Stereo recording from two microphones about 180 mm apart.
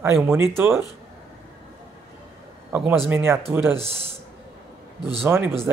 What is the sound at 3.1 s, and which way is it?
Speech, 10° right (ahead or behind).